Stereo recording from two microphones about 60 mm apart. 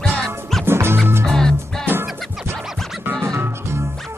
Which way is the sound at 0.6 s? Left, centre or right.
Right.